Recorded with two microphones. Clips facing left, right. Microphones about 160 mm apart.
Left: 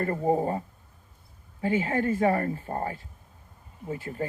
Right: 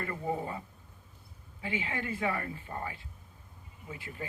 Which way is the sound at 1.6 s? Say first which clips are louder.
Left 10 dB; 45° left (ahead or behind).